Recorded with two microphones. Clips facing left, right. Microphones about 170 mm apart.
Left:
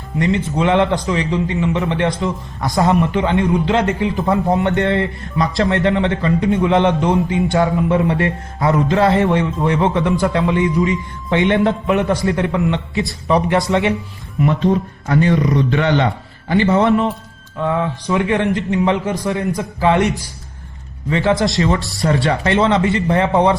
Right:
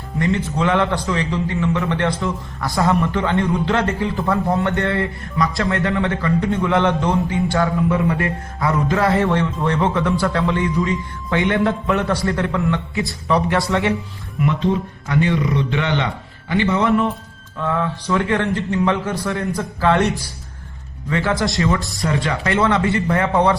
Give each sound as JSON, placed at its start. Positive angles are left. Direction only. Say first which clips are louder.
{"t": 0.2, "sound": "a man's voice", "louder": "left 2 dB", "side_deg": 20}
{"t": 14.4, "sound": "a man's voice", "louder": "left 3 dB", "side_deg": 45}
{"t": 17.6, "sound": "a man's voice", "louder": "left 3 dB", "side_deg": 20}
{"t": 21.1, "sound": "a man's voice", "louder": "left 4 dB", "side_deg": 25}
{"t": 22.0, "sound": "a man's voice", "louder": "left 6 dB", "side_deg": 35}